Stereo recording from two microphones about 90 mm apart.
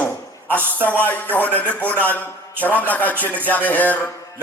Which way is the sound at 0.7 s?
20° left (ahead or behind).